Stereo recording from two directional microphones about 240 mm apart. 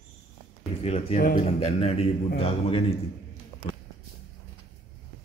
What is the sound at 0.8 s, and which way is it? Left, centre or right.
A man's voice, left.